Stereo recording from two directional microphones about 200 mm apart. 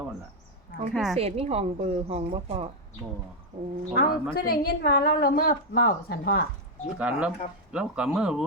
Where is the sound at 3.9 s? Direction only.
50° left (ahead or behind).